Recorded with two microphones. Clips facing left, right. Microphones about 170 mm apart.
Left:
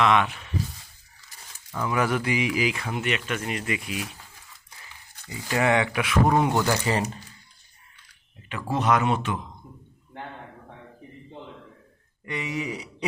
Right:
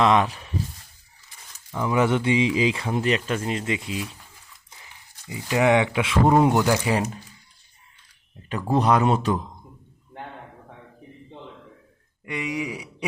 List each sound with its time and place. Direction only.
0.0 s speech: 35° right (ahead or behind)
1.7 s speech: 20° right (ahead or behind)
4.7 s a sound: 20° right (ahead or behind)
5.2 s speech: 15° right (ahead or behind)
6.6 s a man's voice: 10° right (ahead or behind)
8.7 s speech: 35° right (ahead or behind)
12.2 s a man's voice: 15° right (ahead or behind)